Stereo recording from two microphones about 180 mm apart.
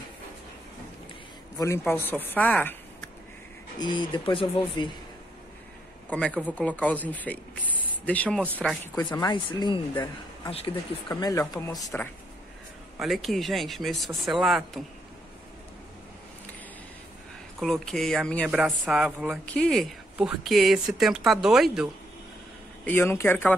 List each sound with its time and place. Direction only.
1.6 s speech: 15° left (ahead or behind)
3.8 s speech: 25° left (ahead or behind)
6.0 s speech: 5° left (ahead or behind)
9.2 s speech: 25° left (ahead or behind)
13.0 s speech: centre (ahead or behind)
17.6 s speech: centre (ahead or behind)
22.8 s speech: 15° left (ahead or behind)